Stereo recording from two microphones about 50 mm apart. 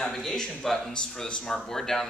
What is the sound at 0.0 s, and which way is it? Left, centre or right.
Speech, centre.